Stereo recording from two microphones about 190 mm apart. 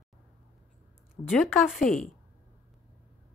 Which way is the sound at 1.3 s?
Centre (ahead or behind).